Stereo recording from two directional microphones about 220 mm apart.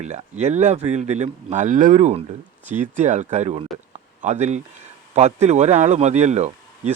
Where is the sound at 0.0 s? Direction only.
30° right (ahead or behind).